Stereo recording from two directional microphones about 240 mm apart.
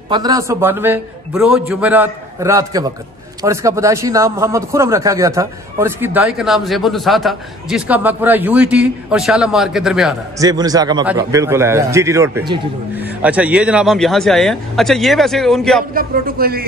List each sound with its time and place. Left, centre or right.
0.1 s a man's voice: centre
10.4 s a man's voice: centre
15.9 s speech: right